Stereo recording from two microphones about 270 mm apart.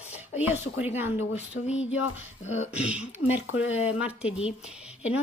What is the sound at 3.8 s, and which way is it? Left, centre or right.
Speech, centre.